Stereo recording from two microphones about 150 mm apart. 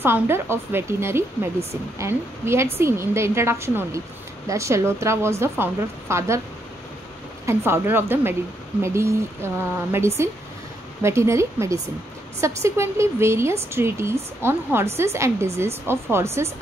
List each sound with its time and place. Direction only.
0.0 s a woman's voice: 15° right (ahead or behind)
7.4 s a woman's voice: 15° right (ahead or behind)